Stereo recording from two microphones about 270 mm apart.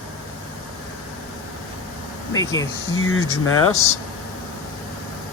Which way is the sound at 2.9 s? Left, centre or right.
Left.